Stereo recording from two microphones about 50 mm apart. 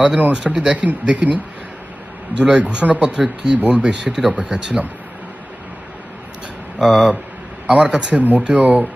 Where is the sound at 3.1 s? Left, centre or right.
Centre.